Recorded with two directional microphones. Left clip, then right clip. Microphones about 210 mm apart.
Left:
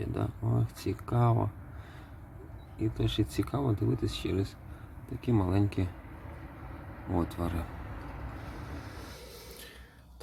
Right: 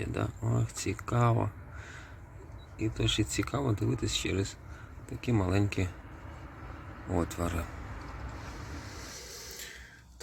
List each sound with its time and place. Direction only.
0.0 s speech: centre (ahead or behind)
2.7 s speech: 5° left (ahead or behind)
7.2 s speech: centre (ahead or behind)